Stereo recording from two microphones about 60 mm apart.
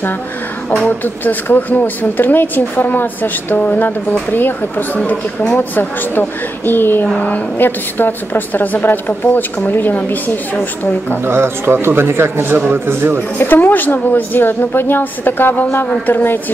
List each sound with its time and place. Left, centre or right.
0.8 s speech: left
7.2 s a woman's voice: left
7.5 s speech: left
11.2 s speech: right
12.5 s speech: right
13.4 s speech: left